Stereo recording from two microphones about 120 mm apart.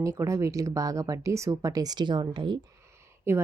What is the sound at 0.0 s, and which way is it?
A woman's voice, 25° right (ahead or behind).